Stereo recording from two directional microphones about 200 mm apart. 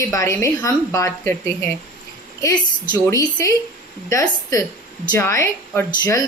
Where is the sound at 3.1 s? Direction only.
15° left (ahead or behind).